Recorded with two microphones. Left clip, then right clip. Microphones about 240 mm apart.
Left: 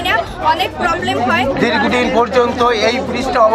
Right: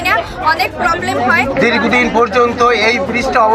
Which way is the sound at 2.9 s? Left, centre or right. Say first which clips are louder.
Right 3 dB; left.